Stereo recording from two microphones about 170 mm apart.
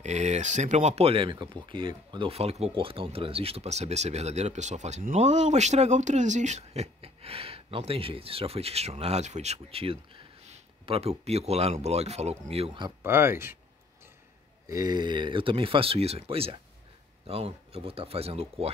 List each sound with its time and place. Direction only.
0.0 s speech: 40° right (ahead or behind)
13.0 s speech: 15° right (ahead or behind)
14.7 s speech: 20° right (ahead or behind)